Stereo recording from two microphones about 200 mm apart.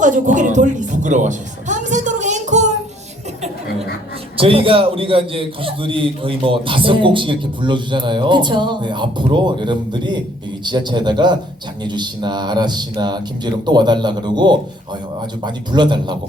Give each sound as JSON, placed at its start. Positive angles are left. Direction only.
{"t": 0.0, "sound": "a woman's voice", "side_deg": -40}
{"t": 4.4, "sound": "a man's voice", "side_deg": -25}